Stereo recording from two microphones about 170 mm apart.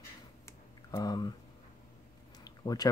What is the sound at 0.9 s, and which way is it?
Speech, 20° left (ahead or behind).